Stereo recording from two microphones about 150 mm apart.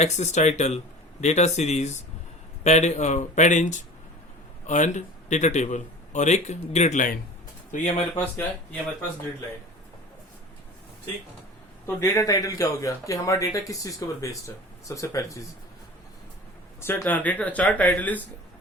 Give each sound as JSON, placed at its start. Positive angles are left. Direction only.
{"t": 0.0, "sound": "a man's voice", "side_deg": 50}
{"t": 8.1, "sound": "speech", "side_deg": 15}
{"t": 11.9, "sound": "speech", "side_deg": 20}
{"t": 16.8, "sound": "speech", "side_deg": 15}